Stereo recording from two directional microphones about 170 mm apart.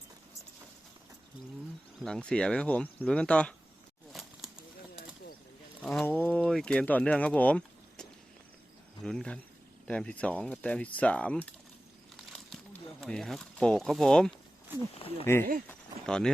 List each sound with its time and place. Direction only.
2.0 s speech: 5° left (ahead or behind)
4.1 s a sound: centre (ahead or behind)
5.8 s speech: 5° left (ahead or behind)
9.0 s speech: 5° left (ahead or behind)
12.1 s crumpling: 5° left (ahead or behind)
13.0 s speech: 5° left (ahead or behind)
15.0 s speech: 35° left (ahead or behind)
15.6 s a sound: 10° left (ahead or behind)